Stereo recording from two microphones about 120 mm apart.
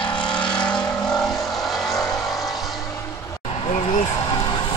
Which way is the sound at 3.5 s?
55° left (ahead or behind).